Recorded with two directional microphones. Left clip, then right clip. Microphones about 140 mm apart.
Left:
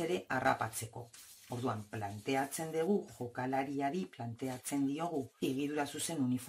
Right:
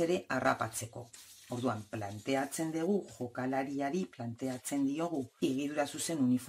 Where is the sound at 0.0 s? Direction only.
35° right (ahead or behind).